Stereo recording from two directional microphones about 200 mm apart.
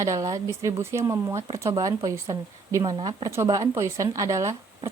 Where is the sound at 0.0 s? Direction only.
15° right (ahead or behind).